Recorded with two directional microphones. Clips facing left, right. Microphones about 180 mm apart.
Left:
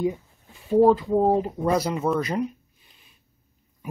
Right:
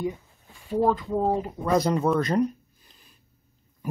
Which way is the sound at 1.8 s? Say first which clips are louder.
Right 2 dB; 5° left (ahead or behind).